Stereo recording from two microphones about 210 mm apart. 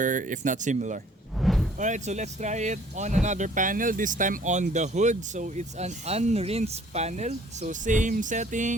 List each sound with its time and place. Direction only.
0.0 s speech: 40° right (ahead or behind)
1.4 s a sound: centre (ahead or behind)
1.8 s speech: 35° right (ahead or behind)